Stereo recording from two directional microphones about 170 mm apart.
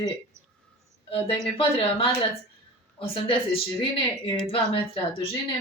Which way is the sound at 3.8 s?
30° left (ahead or behind).